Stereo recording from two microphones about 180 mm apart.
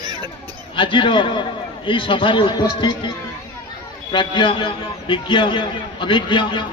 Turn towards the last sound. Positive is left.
turn(degrees=25)  # may be behind; listen again after turning